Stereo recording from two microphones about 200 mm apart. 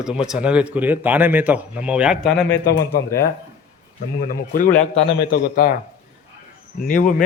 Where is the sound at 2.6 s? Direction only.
50° left (ahead or behind).